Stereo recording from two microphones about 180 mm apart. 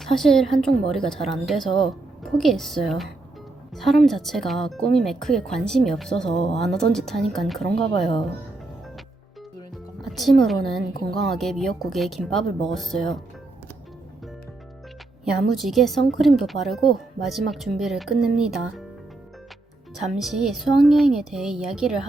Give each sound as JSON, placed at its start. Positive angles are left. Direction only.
{"t": 0.0, "sound": "a woman's voice", "side_deg": 0}
{"t": 7.6, "sound": "speech", "side_deg": 30}
{"t": 10.0, "sound": "a woman's voice", "side_deg": 0}
{"t": 15.2, "sound": "a woman's voice", "side_deg": 0}
{"t": 20.0, "sound": "a woman's voice", "side_deg": 0}